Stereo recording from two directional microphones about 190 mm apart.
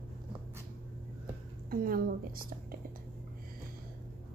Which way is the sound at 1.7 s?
50° right (ahead or behind).